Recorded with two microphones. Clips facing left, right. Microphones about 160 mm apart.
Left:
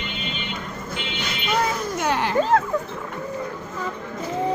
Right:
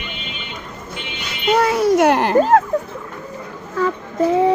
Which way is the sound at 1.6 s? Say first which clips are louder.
Right 12 dB; 80° right.